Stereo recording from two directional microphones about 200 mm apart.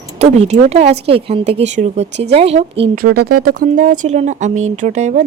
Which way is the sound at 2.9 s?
50° right (ahead or behind).